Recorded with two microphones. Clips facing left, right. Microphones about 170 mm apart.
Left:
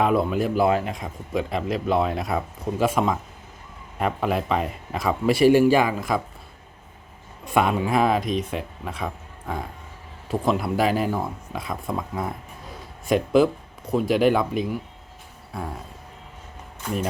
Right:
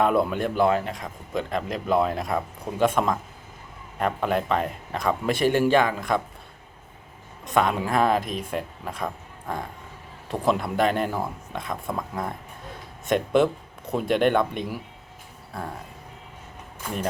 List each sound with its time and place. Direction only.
0.0 s a man's voice: centre (ahead or behind)
7.4 s a man's voice: 10° left (ahead or behind)
10.2 s a man's voice: centre (ahead or behind)